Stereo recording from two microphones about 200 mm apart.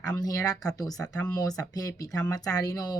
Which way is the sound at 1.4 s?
20° left (ahead or behind).